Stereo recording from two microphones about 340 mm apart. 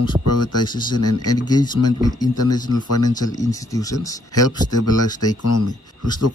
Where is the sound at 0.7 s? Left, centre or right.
Centre.